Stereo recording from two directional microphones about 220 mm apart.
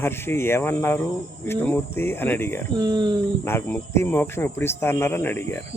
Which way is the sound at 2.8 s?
20° right (ahead or behind).